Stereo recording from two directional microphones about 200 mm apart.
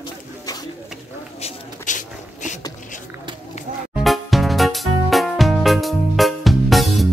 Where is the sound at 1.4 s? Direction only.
40° left (ahead or behind).